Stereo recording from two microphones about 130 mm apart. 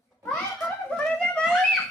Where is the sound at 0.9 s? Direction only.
10° left (ahead or behind).